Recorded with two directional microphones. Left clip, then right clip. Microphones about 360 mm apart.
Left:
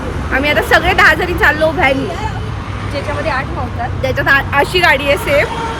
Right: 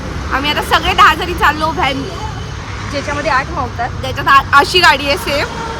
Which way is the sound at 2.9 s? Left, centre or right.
Right.